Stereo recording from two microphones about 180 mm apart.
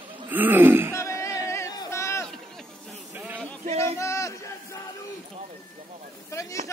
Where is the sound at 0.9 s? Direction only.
15° left (ahead or behind).